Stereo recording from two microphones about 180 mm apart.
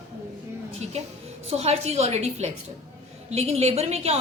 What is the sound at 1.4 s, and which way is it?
A woman's voice, 35° right (ahead or behind).